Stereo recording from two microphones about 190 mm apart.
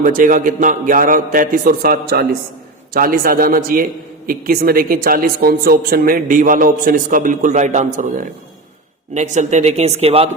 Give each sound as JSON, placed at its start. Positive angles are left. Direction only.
{"t": 0.0, "sound": "a woman's voice", "side_deg": -45}